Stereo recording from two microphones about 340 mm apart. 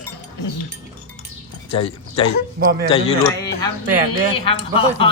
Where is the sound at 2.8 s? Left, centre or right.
Centre.